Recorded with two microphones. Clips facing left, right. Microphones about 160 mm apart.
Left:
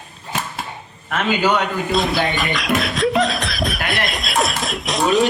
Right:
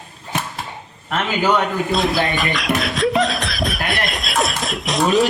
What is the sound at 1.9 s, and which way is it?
Speech, centre (ahead or behind).